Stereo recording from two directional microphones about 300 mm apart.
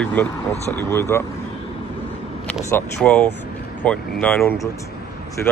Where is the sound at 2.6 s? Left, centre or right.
Centre.